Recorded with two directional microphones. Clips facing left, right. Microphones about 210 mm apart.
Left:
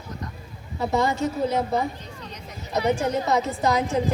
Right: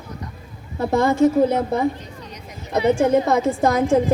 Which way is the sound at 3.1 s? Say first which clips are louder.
Right 6 dB; 50° right (ahead or behind).